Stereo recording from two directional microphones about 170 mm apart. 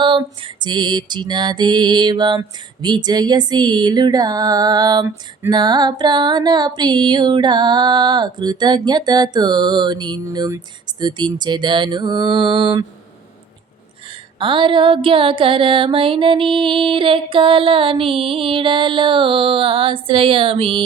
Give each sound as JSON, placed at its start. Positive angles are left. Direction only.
{"t": 0.0, "sound": "lullaby", "side_deg": -30}
{"t": 14.3, "sound": "music", "side_deg": -30}